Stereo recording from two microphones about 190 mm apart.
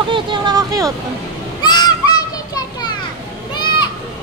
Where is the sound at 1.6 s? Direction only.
20° left (ahead or behind).